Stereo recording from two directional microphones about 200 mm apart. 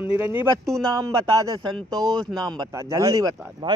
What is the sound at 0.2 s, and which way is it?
Speech, 10° right (ahead or behind).